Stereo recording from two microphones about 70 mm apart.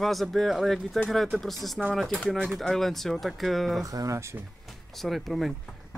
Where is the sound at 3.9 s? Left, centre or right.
Right.